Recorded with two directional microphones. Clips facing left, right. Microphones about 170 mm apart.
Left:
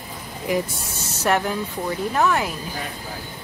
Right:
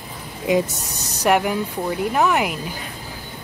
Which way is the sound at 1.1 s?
15° right (ahead or behind).